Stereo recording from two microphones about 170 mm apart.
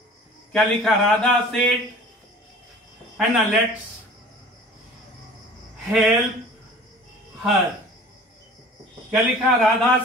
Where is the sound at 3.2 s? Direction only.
5° right (ahead or behind).